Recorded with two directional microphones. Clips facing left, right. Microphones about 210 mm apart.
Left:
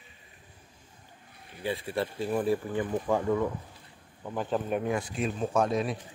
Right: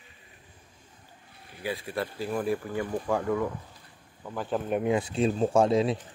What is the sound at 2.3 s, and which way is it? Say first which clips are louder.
Speech: left 2 dB; centre (ahead or behind).